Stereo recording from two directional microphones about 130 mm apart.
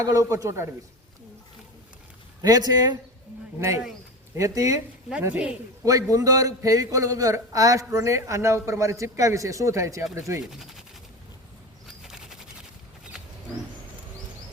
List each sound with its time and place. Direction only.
0.0 s a man's voice: 25° right (ahead or behind)
2.4 s a man's voice: 30° right (ahead or behind)
4.4 s a man's voice: 25° right (ahead or behind)
5.2 s speech: 10° right (ahead or behind)
5.8 s a man's voice: 25° right (ahead or behind)
10.5 s speech: 5° right (ahead or behind)
11.9 s a sound: 5° right (ahead or behind)